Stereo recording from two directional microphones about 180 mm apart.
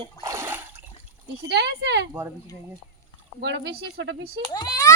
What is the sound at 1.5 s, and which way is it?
Speech, 70° right (ahead or behind).